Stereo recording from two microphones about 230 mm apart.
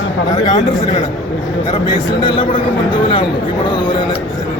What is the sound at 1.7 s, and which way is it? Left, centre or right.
A man's voice, left.